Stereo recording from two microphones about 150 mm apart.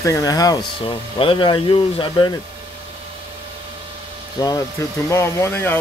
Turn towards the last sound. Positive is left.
turn(degrees=15)  # may be behind; listen again after turning